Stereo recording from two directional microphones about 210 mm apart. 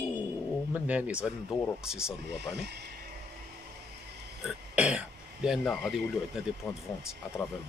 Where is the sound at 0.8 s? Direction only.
5° right (ahead or behind).